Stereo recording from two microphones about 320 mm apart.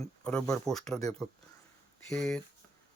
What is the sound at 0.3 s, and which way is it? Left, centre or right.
Speech, centre.